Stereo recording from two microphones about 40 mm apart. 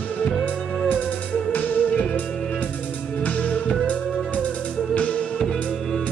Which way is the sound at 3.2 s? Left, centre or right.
Left.